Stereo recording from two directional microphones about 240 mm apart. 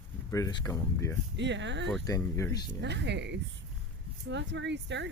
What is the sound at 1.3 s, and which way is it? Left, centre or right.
Speech, right.